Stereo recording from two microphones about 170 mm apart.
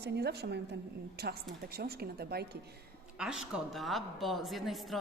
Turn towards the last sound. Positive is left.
turn(degrees=0)  # may be behind; listen again after turning